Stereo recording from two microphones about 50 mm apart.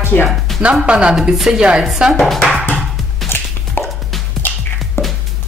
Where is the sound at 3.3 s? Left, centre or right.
Left.